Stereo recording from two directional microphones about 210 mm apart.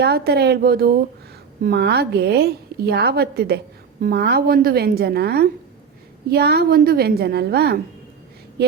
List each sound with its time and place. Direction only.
0.0 s a woman's voice: 50° right (ahead or behind)